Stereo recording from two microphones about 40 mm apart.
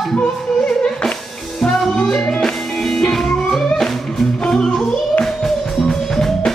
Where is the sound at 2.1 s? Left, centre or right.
Centre.